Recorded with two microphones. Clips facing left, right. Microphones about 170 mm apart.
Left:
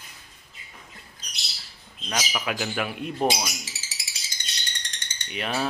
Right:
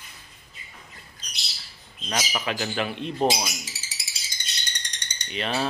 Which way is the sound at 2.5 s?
5° left (ahead or behind).